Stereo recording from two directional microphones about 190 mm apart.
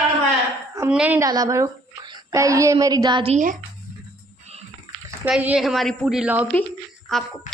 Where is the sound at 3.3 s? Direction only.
45° right (ahead or behind).